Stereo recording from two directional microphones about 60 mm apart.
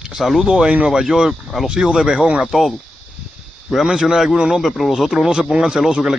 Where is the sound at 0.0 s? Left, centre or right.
Centre.